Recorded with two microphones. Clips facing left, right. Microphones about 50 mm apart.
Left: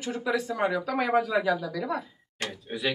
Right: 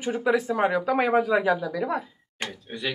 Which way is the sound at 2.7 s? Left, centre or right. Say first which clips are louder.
Left 3 dB; centre.